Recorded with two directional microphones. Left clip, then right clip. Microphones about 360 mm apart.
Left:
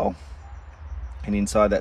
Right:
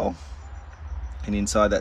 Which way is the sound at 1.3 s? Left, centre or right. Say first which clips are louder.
Left 1 dB; centre.